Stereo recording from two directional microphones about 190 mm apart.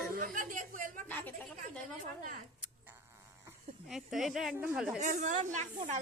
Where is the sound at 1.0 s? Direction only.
10° left (ahead or behind).